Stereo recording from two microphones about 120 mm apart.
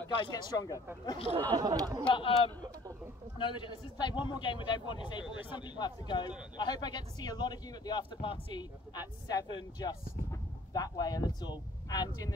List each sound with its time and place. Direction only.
0.2 s a man's voice: 35° left (ahead or behind)
1.5 s speech: 35° right (ahead or behind)
2.0 s a man's voice: 45° left (ahead or behind); by 12.4 s 30° left (ahead or behind)